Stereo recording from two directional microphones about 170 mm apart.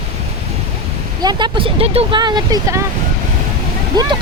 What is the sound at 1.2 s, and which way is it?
Speech, 25° right (ahead or behind).